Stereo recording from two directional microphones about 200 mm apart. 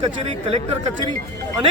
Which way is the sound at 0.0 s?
30° right (ahead or behind).